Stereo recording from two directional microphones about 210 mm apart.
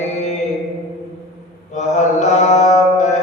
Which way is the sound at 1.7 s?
35° left (ahead or behind).